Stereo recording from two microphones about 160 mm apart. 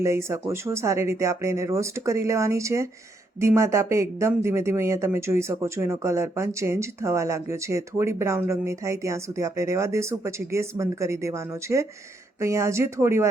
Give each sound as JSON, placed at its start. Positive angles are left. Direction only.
{"t": 0.0, "sound": "speech", "side_deg": -15}